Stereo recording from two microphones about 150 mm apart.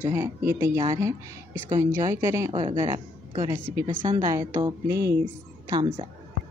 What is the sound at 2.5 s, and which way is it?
A woman's voice, 30° right (ahead or behind).